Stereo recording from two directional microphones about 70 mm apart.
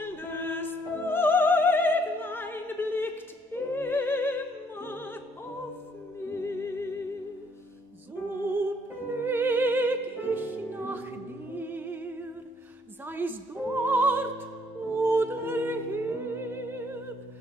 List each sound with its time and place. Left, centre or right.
0.0 s music: left
3.5 s opera: left
6.2 s music: left
8.5 s music: right
13.0 s opera: right
15.0 s music: right